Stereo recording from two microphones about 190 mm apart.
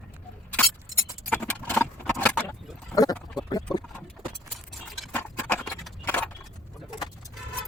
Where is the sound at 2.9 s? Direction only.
20° left (ahead or behind).